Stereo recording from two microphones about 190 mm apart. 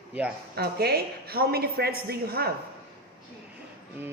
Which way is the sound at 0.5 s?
55° right (ahead or behind).